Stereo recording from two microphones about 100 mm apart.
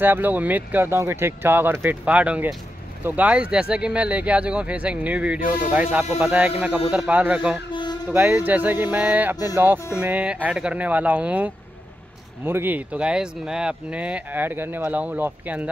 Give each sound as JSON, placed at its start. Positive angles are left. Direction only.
{"t": 0.0, "sound": "speech", "side_deg": -20}
{"t": 2.0, "sound": "speech", "side_deg": -15}
{"t": 7.7, "sound": "a sound", "side_deg": 50}
{"t": 8.1, "sound": "speech", "side_deg": -15}